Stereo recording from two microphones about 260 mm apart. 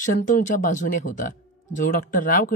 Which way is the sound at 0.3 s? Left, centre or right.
Left.